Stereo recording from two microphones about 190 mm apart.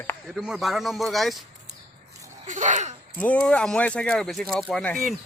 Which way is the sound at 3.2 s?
5° left (ahead or behind).